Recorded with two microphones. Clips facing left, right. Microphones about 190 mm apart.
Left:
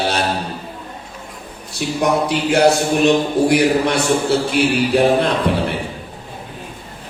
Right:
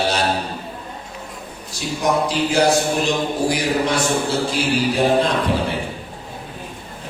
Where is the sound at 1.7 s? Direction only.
60° left (ahead or behind).